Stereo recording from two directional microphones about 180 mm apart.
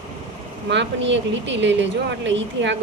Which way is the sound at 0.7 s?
85° right.